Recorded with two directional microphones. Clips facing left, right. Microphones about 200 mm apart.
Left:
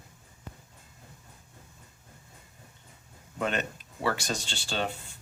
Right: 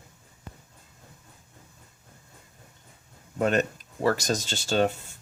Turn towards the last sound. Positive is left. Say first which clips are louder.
# right 8 dB
turn(degrees=-45)  # may be behind; listen again after turning